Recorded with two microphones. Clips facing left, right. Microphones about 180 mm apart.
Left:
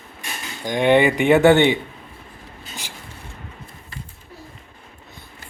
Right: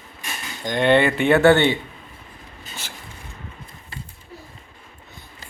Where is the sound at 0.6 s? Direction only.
10° left (ahead or behind).